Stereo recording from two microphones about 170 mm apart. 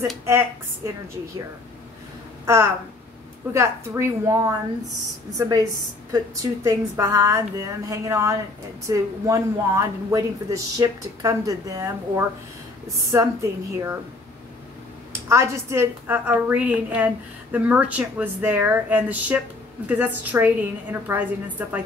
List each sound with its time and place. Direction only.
0.2 s a woman's voice: 15° right (ahead or behind)
2.4 s a woman's voice: 15° right (ahead or behind)
15.2 s a woman's voice: 15° right (ahead or behind)